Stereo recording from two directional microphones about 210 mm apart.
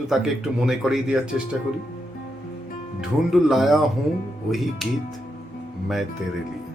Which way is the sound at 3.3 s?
Centre (ahead or behind).